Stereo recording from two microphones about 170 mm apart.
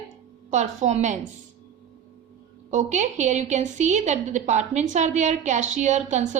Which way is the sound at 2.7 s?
45° right (ahead or behind).